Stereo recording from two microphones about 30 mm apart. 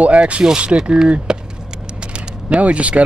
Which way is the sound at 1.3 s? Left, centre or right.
Right.